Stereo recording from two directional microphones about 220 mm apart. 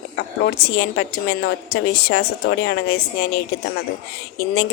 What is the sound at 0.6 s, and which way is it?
Speech, 45° left (ahead or behind).